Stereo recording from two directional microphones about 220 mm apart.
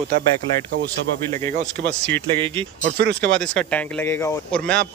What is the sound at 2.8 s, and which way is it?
Speech, 50° right (ahead or behind).